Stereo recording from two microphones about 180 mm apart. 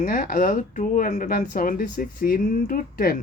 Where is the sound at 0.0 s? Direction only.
50° left (ahead or behind).